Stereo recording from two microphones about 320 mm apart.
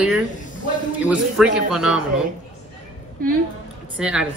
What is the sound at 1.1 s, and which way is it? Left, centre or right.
Speech, centre.